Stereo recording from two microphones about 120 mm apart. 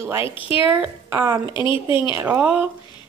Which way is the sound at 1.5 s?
40° left (ahead or behind).